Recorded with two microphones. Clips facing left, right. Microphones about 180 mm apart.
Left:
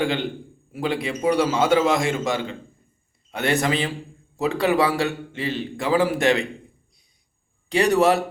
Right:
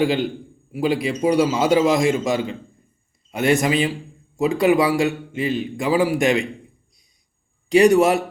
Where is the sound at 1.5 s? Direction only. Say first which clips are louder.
Right 2 dB; 15° right (ahead or behind).